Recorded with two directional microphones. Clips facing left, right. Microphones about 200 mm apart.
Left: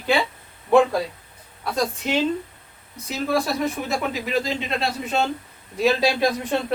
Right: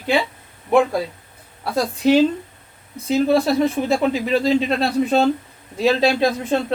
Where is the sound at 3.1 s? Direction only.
30° right (ahead or behind).